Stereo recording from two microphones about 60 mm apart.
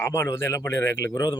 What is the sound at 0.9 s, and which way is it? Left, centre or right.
Speech, left.